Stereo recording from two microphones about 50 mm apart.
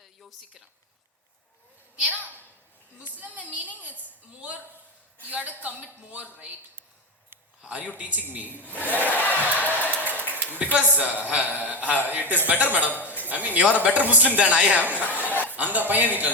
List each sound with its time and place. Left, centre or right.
0.2 s speech: centre
2.0 s a man's voice: right
7.6 s a man's voice: right
9.1 s crowd: left
9.6 s a sound: right
10.6 s a man's voice: right
14.8 s a man's voice: right
15.3 s chuckle: left
15.5 s a man's voice: right